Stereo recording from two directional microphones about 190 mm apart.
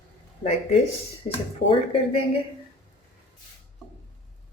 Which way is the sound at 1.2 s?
30° left (ahead or behind).